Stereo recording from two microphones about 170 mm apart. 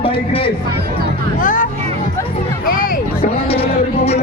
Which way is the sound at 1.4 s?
50° left (ahead or behind).